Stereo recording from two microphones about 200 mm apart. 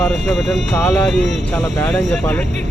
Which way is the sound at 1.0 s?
Centre (ahead or behind).